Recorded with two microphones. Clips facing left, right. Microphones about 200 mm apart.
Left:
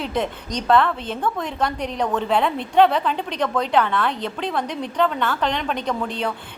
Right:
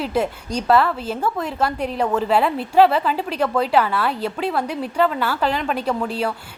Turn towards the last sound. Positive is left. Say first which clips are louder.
# right 2 dB
turn(degrees=-5)  # may be behind; listen again after turning